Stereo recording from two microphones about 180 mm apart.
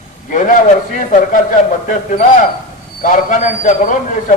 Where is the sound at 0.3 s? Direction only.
45° left (ahead or behind).